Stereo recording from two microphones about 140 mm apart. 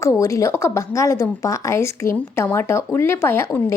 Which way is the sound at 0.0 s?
20° left (ahead or behind).